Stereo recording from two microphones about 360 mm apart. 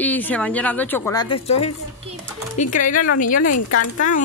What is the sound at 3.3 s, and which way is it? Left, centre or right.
Speech, left.